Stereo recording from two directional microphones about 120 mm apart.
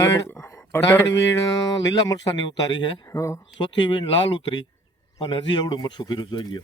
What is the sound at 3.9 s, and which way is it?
Speech, 45° left (ahead or behind).